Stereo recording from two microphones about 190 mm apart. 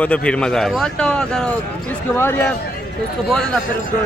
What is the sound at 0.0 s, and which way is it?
A man's voice, 5° left (ahead or behind).